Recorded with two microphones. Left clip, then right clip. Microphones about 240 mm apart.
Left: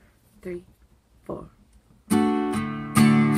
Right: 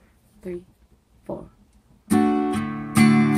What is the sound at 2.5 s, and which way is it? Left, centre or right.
Music, centre.